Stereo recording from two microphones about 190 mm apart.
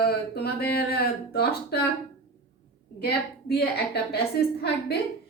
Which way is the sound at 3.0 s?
55° left (ahead or behind).